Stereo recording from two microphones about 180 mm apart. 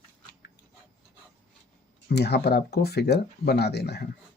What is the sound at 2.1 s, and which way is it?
Speech, 65° left (ahead or behind).